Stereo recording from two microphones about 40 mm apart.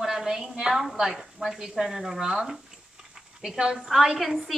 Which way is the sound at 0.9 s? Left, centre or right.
Centre.